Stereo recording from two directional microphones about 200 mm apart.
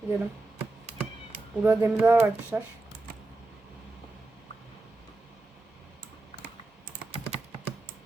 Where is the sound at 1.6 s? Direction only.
10° right (ahead or behind).